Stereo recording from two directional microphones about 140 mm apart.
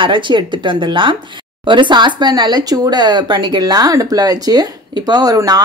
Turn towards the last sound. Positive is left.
turn(degrees=-25)  # may be behind; listen again after turning